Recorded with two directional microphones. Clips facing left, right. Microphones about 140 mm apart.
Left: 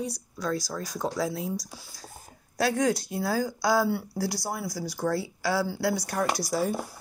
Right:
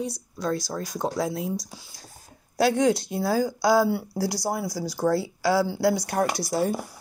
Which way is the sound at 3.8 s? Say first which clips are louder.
Right 4 dB; 10° right (ahead or behind).